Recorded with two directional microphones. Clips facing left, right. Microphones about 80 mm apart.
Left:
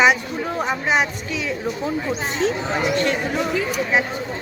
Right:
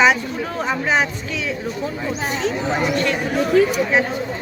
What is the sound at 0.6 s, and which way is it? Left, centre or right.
Speech, centre.